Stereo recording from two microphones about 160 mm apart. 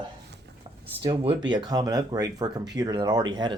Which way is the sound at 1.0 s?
35° right (ahead or behind).